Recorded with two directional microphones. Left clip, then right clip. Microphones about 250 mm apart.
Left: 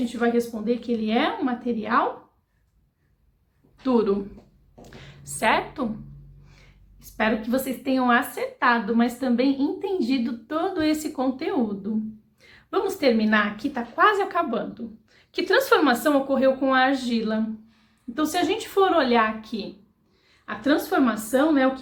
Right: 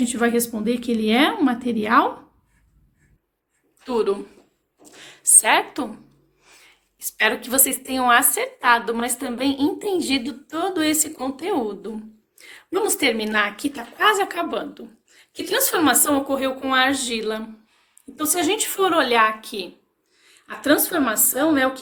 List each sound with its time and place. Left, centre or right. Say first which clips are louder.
0.0 s a woman's voice: right 2 dB; right
3.9 s a woman's voice: right 2 dB; right
6.4 s a sound: right 6 dB; right
7.2 s a woman's voice: right 3 dB; right